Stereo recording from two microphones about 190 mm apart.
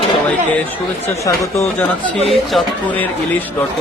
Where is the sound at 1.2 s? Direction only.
15° left (ahead or behind).